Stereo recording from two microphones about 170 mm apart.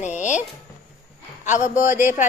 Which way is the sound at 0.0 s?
45° left (ahead or behind).